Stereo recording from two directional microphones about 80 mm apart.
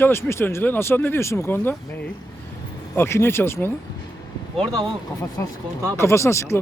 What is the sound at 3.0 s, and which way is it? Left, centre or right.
Speech, left.